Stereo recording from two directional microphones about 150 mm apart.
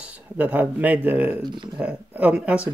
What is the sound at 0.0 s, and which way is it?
Speech, 10° right (ahead or behind).